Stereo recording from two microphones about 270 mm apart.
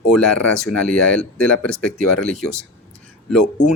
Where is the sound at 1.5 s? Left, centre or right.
Left.